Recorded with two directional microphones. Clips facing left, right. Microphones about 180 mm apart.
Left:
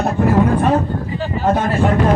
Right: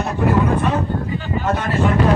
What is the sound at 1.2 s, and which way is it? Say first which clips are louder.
Speech: left 8 dB; 45° left (ahead or behind).